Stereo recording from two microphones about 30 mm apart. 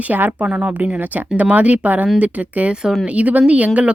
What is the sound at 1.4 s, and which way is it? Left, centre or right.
A woman's voice, right.